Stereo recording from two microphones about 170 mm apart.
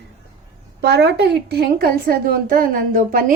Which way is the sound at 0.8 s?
75° right (ahead or behind).